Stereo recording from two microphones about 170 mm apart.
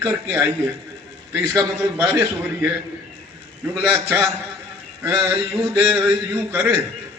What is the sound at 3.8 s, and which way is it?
Speech, 15° right (ahead or behind).